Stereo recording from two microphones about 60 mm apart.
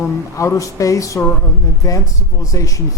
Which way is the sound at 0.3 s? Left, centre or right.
Left.